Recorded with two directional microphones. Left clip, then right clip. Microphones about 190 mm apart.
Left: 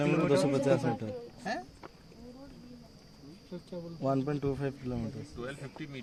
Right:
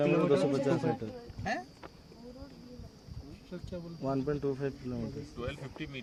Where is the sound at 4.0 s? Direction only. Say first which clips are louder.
Left 1 dB; 55° left (ahead or behind).